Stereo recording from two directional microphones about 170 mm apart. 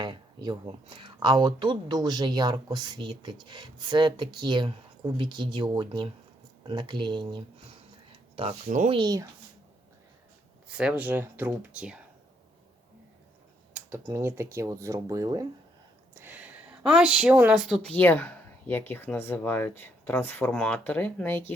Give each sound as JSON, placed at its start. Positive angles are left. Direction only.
{"t": 0.0, "sound": "speech", "side_deg": -25}
{"t": 8.6, "sound": "speech", "side_deg": -50}
{"t": 8.9, "sound": "speech", "side_deg": -25}
{"t": 10.7, "sound": "speech", "side_deg": -5}
{"t": 13.7, "sound": "speech", "side_deg": -15}
{"t": 16.2, "sound": "speech", "side_deg": -10}
{"t": 17.9, "sound": "speech", "side_deg": 10}